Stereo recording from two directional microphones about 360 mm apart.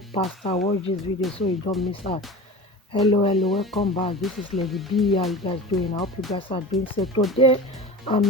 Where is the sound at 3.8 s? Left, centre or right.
Centre.